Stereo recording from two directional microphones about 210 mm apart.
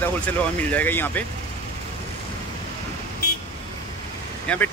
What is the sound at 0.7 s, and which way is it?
Speech, 10° left (ahead or behind).